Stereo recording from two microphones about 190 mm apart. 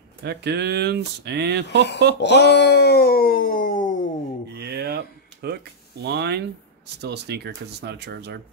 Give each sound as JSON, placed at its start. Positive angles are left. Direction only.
{"t": 0.2, "sound": "speech", "side_deg": -60}
{"t": 2.1, "sound": "speech", "side_deg": 65}
{"t": 4.6, "sound": "a sound", "side_deg": -55}
{"t": 6.0, "sound": "speech", "side_deg": -60}